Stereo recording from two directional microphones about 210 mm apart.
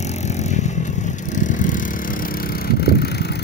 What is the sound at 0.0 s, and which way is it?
Vehicle, 35° left (ahead or behind).